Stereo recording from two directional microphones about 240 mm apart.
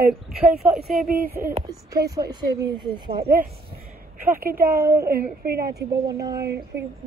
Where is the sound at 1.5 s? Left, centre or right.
Centre.